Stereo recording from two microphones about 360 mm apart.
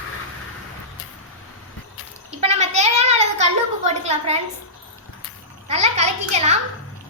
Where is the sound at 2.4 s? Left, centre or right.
Centre.